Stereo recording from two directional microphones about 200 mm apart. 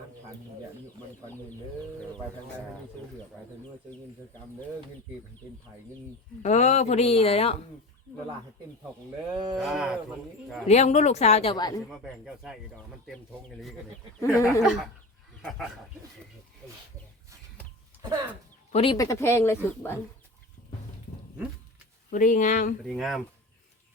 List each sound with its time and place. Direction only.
6.4 s speech: 35° left (ahead or behind)
9.3 s speech: 20° right (ahead or behind)
9.6 s speech: 5° right (ahead or behind)
10.7 s speech: 35° left (ahead or behind)
11.5 s a woman's voice: 20° left (ahead or behind)
11.9 s speech: centre (ahead or behind)
14.2 s speech: 15° left (ahead or behind)
15.4 s dog: 5° left (ahead or behind)
18.7 s speech: 30° left (ahead or behind)
18.9 s speech: 15° left (ahead or behind)
22.1 s speech: 40° left (ahead or behind)
22.9 s speech: centre (ahead or behind)